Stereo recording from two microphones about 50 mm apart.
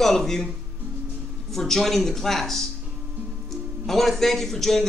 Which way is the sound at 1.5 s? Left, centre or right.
Centre.